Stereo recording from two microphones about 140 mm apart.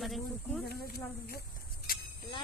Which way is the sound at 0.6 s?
90° left.